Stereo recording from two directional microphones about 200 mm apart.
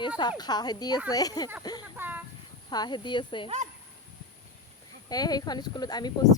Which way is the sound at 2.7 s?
20° left (ahead or behind).